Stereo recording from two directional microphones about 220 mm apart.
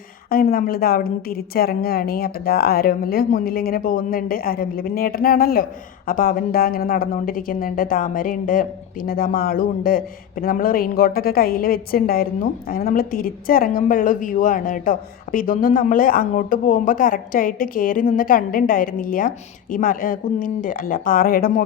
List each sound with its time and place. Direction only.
0.3 s a woman's voice: 40° left (ahead or behind)